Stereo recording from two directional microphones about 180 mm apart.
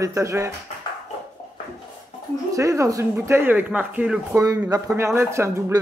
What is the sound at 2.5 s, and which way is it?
Speech, 15° right (ahead or behind).